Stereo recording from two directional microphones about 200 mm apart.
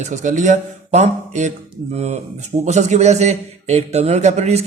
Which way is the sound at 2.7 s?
35° right (ahead or behind).